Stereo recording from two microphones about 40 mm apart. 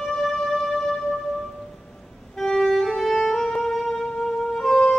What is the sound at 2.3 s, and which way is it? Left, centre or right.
Music, centre.